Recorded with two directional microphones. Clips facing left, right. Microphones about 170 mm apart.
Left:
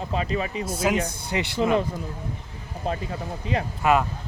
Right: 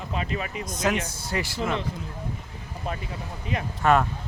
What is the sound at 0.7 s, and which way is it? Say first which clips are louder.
Speech: left 1 dB; 10° left (ahead or behind).